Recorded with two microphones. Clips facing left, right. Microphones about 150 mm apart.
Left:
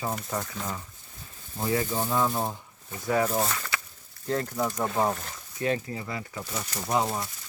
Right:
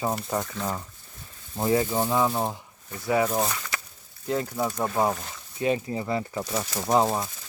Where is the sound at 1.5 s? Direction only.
25° right (ahead or behind).